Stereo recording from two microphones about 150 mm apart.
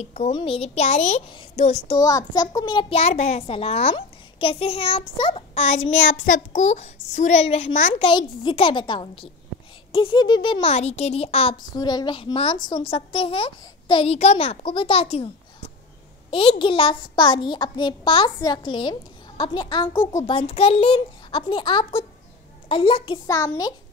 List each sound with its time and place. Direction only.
0.0 s a child's voice: 50° left (ahead or behind)
0.3 s a child's voice: 35° left (ahead or behind)
2.0 s a child's voice: 25° left (ahead or behind)
3.0 s a child's voice: 50° left (ahead or behind); by 10.6 s 30° left (ahead or behind)
10.6 s a child's voice: 45° left (ahead or behind)
11.8 s a child's voice: 30° left (ahead or behind)
16.3 s a child's voice: 35° left (ahead or behind)